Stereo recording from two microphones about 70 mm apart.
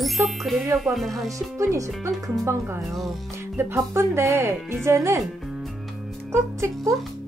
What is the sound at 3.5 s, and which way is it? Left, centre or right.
Speech, right.